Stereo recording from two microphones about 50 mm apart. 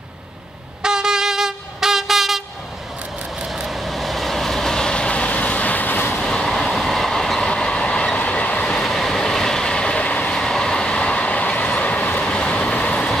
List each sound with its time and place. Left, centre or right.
0.8 s train: centre
3.4 s vehicle: centre; by 6.1 s left
6.2 s train: centre; by 8.6 s left
8.8 s train: centre; by 10.3 s left
10.3 s train: centre; by 12.3 s left
12.3 s vehicle: left